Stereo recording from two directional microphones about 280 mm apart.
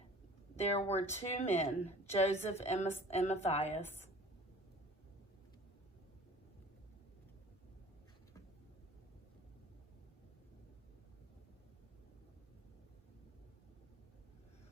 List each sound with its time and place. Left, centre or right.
0.6 s a woman's voice: left